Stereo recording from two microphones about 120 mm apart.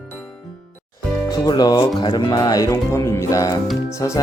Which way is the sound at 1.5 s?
35° left (ahead or behind).